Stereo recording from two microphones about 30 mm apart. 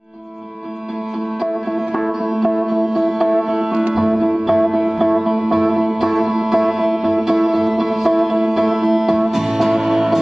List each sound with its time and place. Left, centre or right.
2.0 s music: centre